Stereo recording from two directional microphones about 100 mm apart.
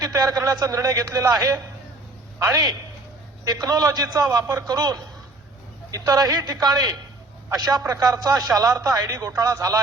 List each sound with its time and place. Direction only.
0.0 s a man's voice: 35° right (ahead or behind)
3.4 s a man's voice: 40° right (ahead or behind)